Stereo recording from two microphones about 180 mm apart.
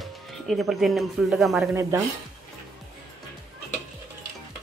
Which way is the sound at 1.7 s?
15° right (ahead or behind).